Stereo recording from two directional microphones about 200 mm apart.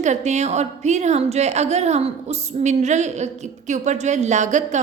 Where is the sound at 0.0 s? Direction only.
35° right (ahead or behind).